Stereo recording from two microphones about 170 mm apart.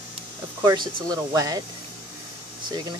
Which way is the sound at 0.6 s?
25° right (ahead or behind).